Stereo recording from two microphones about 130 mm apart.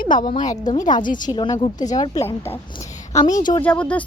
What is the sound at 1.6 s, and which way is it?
Speech, 65° left (ahead or behind).